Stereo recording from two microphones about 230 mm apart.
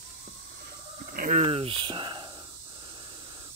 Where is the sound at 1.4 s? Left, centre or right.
Right.